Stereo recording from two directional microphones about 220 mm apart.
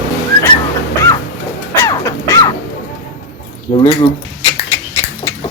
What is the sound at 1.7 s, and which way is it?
Crow, 15° left (ahead or behind).